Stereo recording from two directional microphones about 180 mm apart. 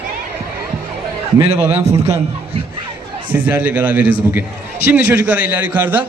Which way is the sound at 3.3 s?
10° right (ahead or behind).